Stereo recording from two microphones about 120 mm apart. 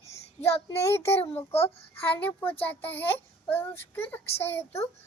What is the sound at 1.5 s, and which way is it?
Speech, 55° left (ahead or behind).